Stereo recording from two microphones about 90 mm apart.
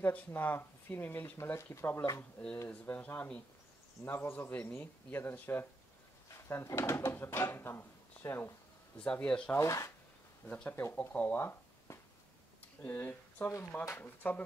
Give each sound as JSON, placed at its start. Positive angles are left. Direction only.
{"t": 0.0, "sound": "speech", "side_deg": 20}
{"t": 2.7, "sound": "speech", "side_deg": 15}
{"t": 9.0, "sound": "speech", "side_deg": 10}
{"t": 9.6, "sound": "speech", "side_deg": 35}
{"t": 10.4, "sound": "speech", "side_deg": 15}